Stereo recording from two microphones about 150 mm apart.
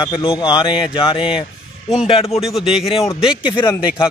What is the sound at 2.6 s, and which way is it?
Speech, centre (ahead or behind).